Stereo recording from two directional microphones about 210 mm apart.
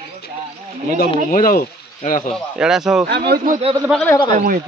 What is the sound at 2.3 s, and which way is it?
Speech, centre (ahead or behind).